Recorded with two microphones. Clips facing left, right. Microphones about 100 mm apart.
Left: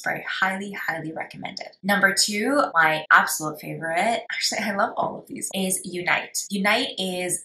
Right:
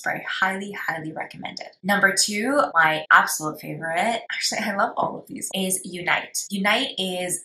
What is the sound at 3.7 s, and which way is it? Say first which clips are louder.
A woman's voice: left 1 dB; centre (ahead or behind).